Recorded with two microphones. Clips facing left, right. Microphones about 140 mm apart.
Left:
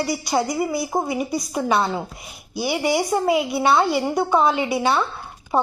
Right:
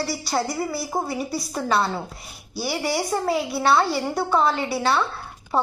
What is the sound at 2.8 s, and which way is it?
Speech, 20° left (ahead or behind).